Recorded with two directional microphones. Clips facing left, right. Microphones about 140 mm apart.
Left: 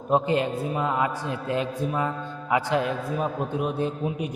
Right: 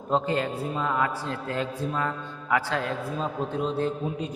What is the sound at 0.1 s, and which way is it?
A man's voice, 20° left (ahead or behind).